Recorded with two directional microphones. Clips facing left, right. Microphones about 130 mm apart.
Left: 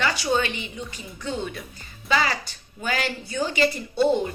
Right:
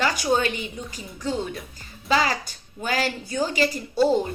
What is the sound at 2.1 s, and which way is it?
A woman's voice, 40° right (ahead or behind).